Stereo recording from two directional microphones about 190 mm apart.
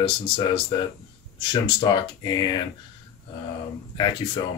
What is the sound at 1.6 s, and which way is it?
Speech, 25° left (ahead or behind).